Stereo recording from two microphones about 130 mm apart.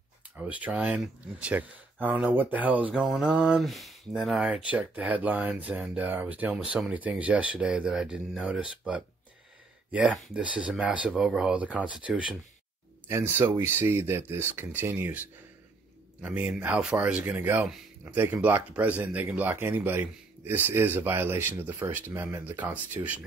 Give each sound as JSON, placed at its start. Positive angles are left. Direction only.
{"t": 0.4, "sound": "speech", "side_deg": -10}